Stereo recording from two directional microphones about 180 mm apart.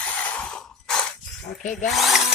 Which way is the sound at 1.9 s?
Centre (ahead or behind).